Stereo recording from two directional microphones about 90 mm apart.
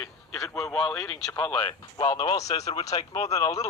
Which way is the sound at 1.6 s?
55° left (ahead or behind).